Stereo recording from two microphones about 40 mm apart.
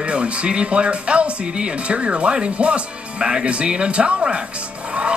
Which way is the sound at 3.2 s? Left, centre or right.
Centre.